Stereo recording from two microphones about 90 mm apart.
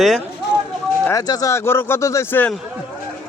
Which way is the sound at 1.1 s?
45° left (ahead or behind).